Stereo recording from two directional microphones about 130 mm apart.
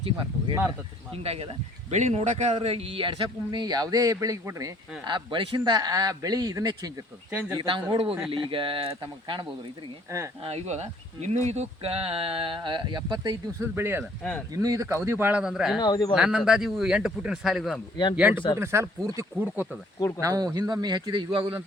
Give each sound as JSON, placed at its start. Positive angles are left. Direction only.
{"t": 0.0, "sound": "speech", "side_deg": -40}
{"t": 2.6, "sound": "speech", "side_deg": -50}
{"t": 5.0, "sound": "speech", "side_deg": -40}
{"t": 5.5, "sound": "speech", "side_deg": -30}
{"t": 7.3, "sound": "speech", "side_deg": -15}
{"t": 7.5, "sound": "speech", "side_deg": -35}
{"t": 10.4, "sound": "speech", "side_deg": -55}
{"t": 13.6, "sound": "speech", "side_deg": -20}
{"t": 14.0, "sound": "speech", "side_deg": 10}
{"t": 14.5, "sound": "speech", "side_deg": -25}
{"t": 15.8, "sound": "speech", "side_deg": 35}
{"t": 16.1, "sound": "speech", "side_deg": -5}
{"t": 18.2, "sound": "speech", "side_deg": -15}
{"t": 20.1, "sound": "speech", "side_deg": -25}